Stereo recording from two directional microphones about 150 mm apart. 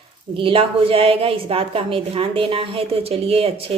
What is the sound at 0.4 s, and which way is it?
A woman's voice, 35° right (ahead or behind).